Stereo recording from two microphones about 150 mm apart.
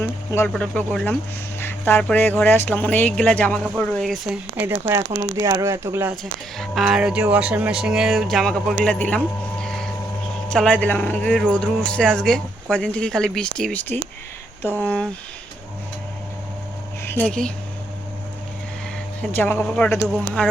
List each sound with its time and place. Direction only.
0.0 s a sound: 15° left (ahead or behind)
0.5 s speech: 5° left (ahead or behind)
3.6 s speech: centre (ahead or behind); by 5.0 s 15° right (ahead or behind)
5.0 s speech: 60° right (ahead or behind)
5.4 s speech: 20° right (ahead or behind)
6.6 s speech: centre (ahead or behind)
19.3 s speech: 15° left (ahead or behind)